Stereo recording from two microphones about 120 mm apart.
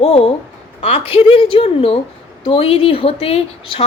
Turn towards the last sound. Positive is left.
turn(degrees=55)  # may be behind; listen again after turning